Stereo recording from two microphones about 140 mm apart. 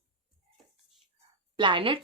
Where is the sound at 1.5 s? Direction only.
35° right (ahead or behind).